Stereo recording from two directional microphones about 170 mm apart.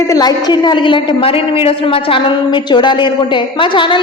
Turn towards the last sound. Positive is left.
turn(degrees=30)  # may be behind; listen again after turning